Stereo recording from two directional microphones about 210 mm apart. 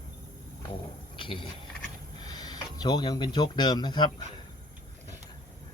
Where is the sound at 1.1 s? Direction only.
25° left (ahead or behind).